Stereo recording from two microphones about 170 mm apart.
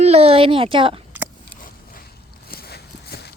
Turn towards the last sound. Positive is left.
turn(degrees=65)  # may be behind; listen again after turning